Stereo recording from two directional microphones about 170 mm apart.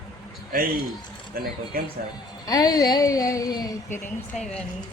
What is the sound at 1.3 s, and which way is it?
Speech, 60° right (ahead or behind).